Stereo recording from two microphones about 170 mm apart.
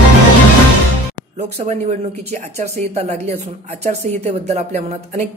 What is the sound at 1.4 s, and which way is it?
A man's voice, 40° right (ahead or behind).